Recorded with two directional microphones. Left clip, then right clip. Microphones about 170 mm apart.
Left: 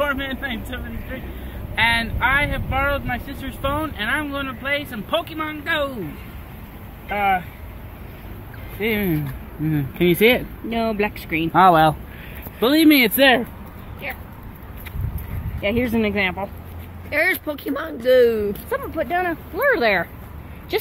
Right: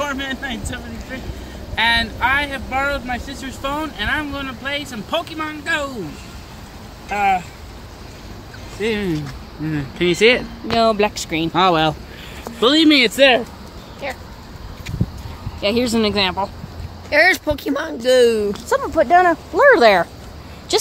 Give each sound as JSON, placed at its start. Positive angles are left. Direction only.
{"t": 0.0, "sound": "speech", "side_deg": 0}
{"t": 1.8, "sound": "speech", "side_deg": -5}
{"t": 7.1, "sound": "speech", "side_deg": 0}
{"t": 8.8, "sound": "speech", "side_deg": 20}
{"t": 9.7, "sound": "speech", "side_deg": 45}
{"t": 10.7, "sound": "speech", "side_deg": -15}
{"t": 11.5, "sound": "speech", "side_deg": 20}
{"t": 12.9, "sound": "speech", "side_deg": 45}
{"t": 14.0, "sound": "speech", "side_deg": -50}
{"t": 15.6, "sound": "speech", "side_deg": -10}
{"t": 17.1, "sound": "speech", "side_deg": -65}
{"t": 18.7, "sound": "speech", "side_deg": -30}